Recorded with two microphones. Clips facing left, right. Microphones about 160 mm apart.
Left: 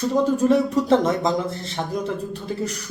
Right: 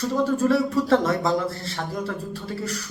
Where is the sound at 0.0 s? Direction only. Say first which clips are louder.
Left 3 dB; 20° left (ahead or behind).